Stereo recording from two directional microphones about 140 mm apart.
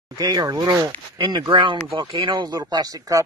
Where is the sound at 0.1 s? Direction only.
30° right (ahead or behind).